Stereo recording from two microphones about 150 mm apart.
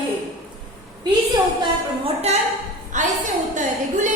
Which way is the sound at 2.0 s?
45° right (ahead or behind).